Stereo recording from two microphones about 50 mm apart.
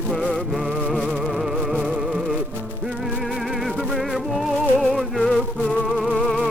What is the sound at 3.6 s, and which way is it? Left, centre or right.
Music, centre.